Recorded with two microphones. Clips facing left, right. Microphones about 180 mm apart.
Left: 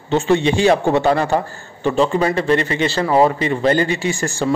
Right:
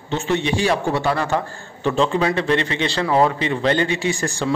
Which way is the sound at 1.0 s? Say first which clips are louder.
Left 5 dB; 50° left (ahead or behind).